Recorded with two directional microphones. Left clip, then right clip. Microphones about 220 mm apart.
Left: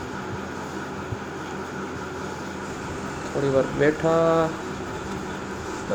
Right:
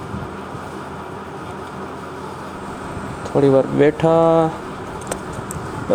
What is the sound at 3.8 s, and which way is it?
Mantra, 25° right (ahead or behind).